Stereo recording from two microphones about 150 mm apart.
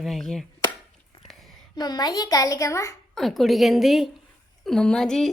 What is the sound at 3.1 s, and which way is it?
A woman's voice, centre (ahead or behind).